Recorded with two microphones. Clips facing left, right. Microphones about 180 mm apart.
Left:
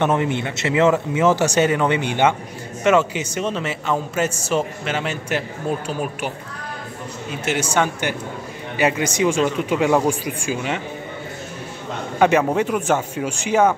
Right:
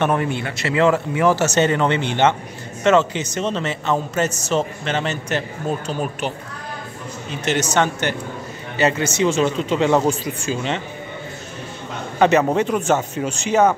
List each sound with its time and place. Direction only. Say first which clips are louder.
0.0 s a man's voice: left 1 dB; 20° left (ahead or behind)
7.2 s a man's voice: right 2 dB; 10° left (ahead or behind)
12.2 s a man's voice: right 1 dB; 10° left (ahead or behind)